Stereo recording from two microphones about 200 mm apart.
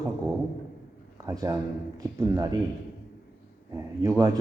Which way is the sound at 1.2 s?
15° right (ahead or behind).